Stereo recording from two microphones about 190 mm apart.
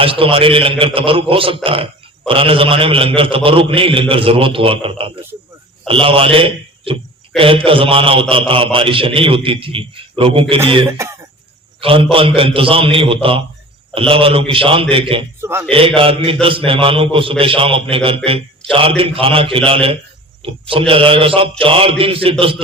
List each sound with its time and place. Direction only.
0.0 s a man's voice: 30° right (ahead or behind)
10.8 s cough: 15° right (ahead or behind)
11.8 s a man's voice: 30° right (ahead or behind)
15.4 s a man's voice: 10° right (ahead or behind)
16.0 s a man's voice: 30° right (ahead or behind)